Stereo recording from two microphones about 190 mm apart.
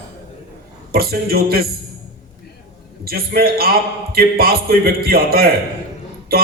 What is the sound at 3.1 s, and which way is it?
A man's voice, 55° right (ahead or behind).